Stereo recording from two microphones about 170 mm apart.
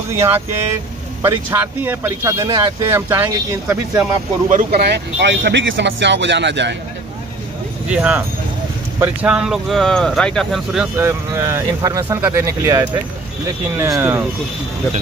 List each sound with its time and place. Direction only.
1.2 s speech: 20° right (ahead or behind)
2.9 s speech: 15° right (ahead or behind)
4.5 s speech: 60° right (ahead or behind); by 6.8 s 90° right
7.9 s speech: 10° right (ahead or behind)
11.0 s speech: 15° right (ahead or behind)